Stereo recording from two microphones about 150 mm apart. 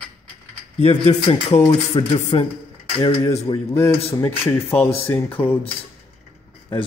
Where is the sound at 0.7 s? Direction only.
45° left (ahead or behind).